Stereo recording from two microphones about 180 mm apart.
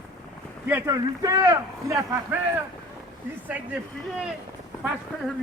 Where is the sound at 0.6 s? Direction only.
15° right (ahead or behind).